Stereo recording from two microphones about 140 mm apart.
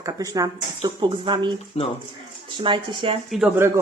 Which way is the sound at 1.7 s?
45° left (ahead or behind).